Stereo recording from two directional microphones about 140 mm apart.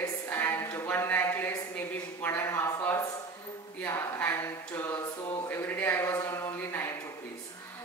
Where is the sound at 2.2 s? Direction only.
15° left (ahead or behind).